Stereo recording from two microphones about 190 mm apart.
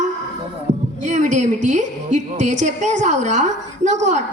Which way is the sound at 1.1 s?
40° right (ahead or behind).